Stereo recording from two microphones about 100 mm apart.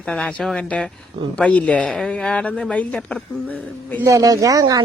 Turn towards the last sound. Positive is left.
turn(degrees=-40)  # may be behind; listen again after turning